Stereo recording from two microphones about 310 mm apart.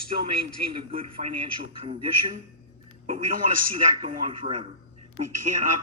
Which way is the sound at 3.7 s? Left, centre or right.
Centre.